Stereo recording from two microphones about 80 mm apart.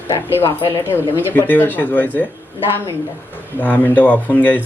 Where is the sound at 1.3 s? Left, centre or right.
Left.